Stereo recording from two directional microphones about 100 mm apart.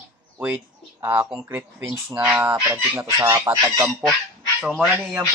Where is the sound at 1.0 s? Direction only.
25° right (ahead or behind).